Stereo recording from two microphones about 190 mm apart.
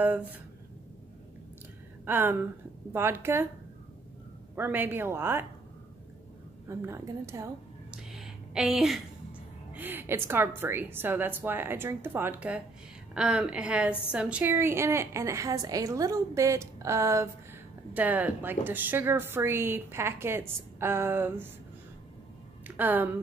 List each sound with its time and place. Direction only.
0.0 s a woman's voice: 10° right (ahead or behind)
2.0 s a woman's voice: 10° right (ahead or behind)
4.6 s a woman's voice: 10° right (ahead or behind)
6.7 s a woman's voice: 15° right (ahead or behind)
7.9 s a sound: centre (ahead or behind)
9.8 s a woman's voice: 10° right (ahead or behind)
22.8 s a woman's voice: 10° right (ahead or behind)